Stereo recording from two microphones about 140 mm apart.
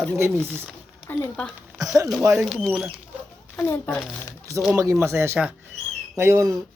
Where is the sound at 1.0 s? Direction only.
15° left (ahead or behind).